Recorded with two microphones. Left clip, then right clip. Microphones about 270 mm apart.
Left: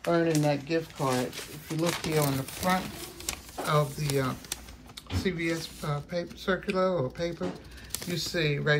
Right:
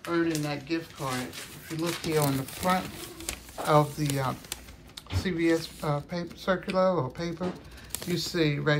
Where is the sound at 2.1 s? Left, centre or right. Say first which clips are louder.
Right 1 dB; centre.